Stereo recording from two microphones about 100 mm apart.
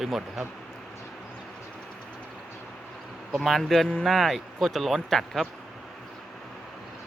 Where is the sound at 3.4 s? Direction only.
5° left (ahead or behind).